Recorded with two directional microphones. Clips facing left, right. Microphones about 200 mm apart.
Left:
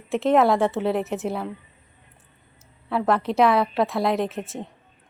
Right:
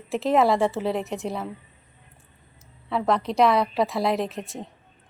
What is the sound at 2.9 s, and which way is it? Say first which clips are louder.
Speech: left 1 dB; centre (ahead or behind).